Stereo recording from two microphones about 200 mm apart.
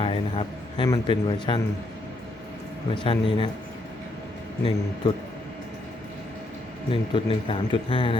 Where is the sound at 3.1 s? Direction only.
25° left (ahead or behind).